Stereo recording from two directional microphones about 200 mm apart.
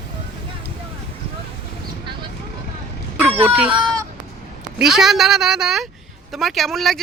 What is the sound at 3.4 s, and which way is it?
Speech, 10° right (ahead or behind).